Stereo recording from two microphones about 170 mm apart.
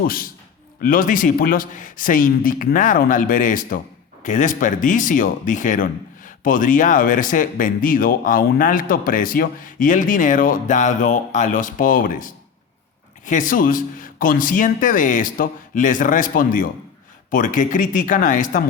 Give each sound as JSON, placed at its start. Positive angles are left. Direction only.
{"t": 0.0, "sound": "speech", "side_deg": 60}